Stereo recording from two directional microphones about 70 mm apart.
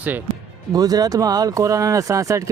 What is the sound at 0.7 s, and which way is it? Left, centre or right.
Speech, right.